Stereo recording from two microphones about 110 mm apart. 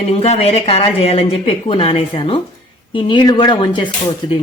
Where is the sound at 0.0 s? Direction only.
70° left (ahead or behind).